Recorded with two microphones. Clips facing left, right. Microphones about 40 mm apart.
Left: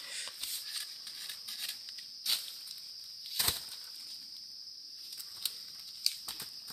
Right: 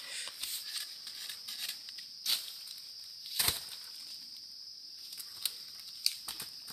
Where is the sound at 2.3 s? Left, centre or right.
Centre.